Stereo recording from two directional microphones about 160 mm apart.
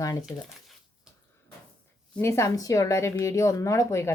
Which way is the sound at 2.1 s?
15° left (ahead or behind).